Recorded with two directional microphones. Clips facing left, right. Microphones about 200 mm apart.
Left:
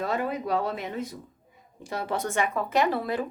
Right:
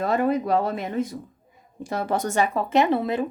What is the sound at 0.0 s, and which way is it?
A woman's voice, 50° right (ahead or behind).